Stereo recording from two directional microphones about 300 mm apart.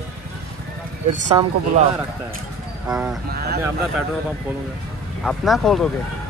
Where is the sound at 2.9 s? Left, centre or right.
Centre.